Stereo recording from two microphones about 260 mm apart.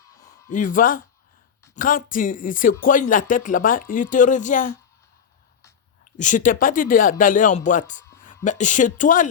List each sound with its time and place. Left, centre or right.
0.0 s a sound: centre
0.5 s speech: left
6.1 s speech: left